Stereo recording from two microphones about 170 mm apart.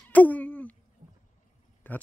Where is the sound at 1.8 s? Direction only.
10° left (ahead or behind).